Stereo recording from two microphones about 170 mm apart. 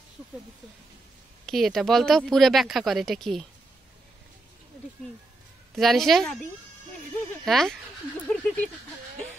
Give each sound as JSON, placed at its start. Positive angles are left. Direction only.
{"t": 1.4, "sound": "speech", "side_deg": 0}
{"t": 5.8, "sound": "speech", "side_deg": 0}
{"t": 7.4, "sound": "speech", "side_deg": 0}